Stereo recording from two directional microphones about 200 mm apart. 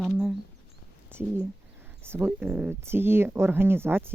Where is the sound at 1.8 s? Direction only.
10° right (ahead or behind).